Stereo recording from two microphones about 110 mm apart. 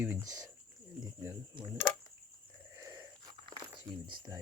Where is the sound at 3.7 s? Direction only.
45° right (ahead or behind).